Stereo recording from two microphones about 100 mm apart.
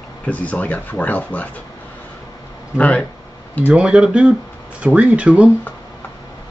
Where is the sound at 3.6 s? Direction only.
10° right (ahead or behind).